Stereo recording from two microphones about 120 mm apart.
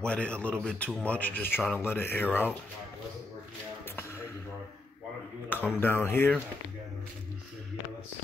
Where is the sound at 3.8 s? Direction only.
20° left (ahead or behind).